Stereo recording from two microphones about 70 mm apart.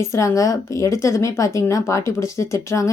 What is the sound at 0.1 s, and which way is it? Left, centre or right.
Speech, left.